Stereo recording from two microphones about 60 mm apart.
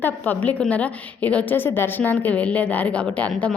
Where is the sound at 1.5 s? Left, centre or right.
Left.